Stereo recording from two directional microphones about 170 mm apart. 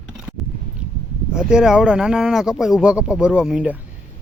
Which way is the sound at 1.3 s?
5° right (ahead or behind).